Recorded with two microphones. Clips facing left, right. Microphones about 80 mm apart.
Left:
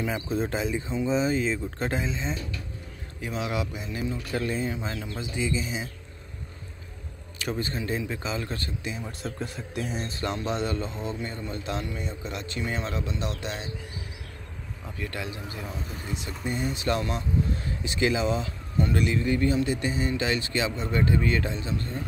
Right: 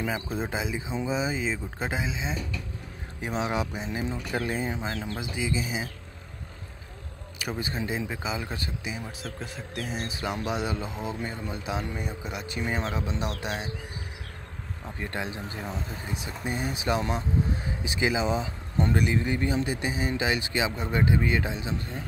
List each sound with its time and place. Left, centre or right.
0.1 s speech: centre
3.3 s speech: right
5.4 s speech: centre
7.3 s speech: centre
9.2 s speech: centre
15.0 s speech: right